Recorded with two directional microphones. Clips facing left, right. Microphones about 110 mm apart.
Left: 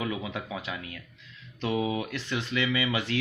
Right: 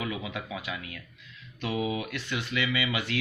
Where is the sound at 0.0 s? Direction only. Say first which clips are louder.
Left 2 dB; 30° left (ahead or behind).